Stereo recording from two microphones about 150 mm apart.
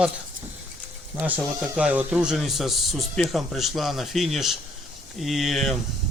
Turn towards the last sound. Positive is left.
turn(degrees=0)  # may be behind; listen again after turning